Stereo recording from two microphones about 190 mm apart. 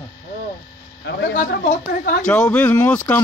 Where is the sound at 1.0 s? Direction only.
70° left (ahead or behind).